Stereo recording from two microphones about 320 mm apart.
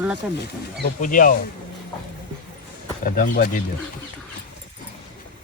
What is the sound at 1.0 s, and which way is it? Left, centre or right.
Speech, left.